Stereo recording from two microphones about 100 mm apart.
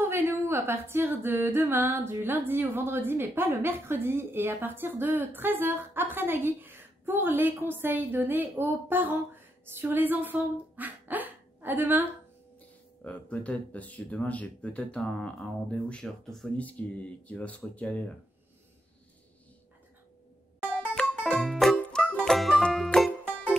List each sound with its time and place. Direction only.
0.0 s speech: 25° right (ahead or behind)
13.0 s speech: 15° left (ahead or behind)
20.8 s music: 10° left (ahead or behind)